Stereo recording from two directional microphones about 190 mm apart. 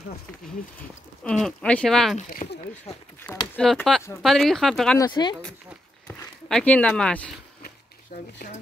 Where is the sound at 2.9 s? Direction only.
35° left (ahead or behind).